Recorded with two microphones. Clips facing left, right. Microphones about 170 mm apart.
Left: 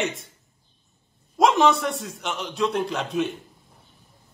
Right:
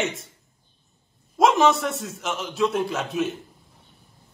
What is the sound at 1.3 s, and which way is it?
A man's voice, centre (ahead or behind).